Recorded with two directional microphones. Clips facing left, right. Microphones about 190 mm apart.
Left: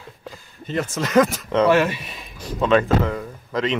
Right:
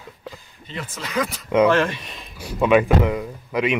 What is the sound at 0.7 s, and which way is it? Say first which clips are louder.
Speech: left 8 dB; 45° left (ahead or behind).